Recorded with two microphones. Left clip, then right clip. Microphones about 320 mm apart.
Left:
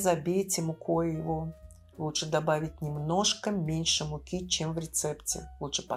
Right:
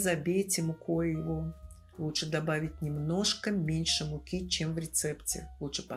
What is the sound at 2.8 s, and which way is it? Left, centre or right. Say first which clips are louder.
Speech: left 5 dB; left.